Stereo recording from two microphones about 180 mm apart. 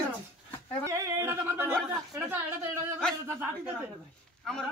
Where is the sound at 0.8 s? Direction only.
15° right (ahead or behind).